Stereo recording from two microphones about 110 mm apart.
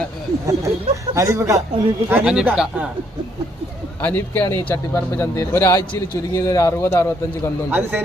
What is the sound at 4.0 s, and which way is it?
Speech, 15° left (ahead or behind).